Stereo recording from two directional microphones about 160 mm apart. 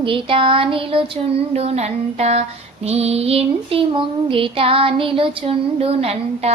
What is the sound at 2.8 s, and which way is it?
Female singing, 40° right (ahead or behind).